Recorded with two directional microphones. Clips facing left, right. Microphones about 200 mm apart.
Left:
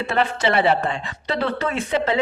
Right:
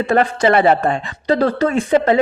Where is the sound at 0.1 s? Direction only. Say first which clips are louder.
Right 6 dB; 45° right (ahead or behind).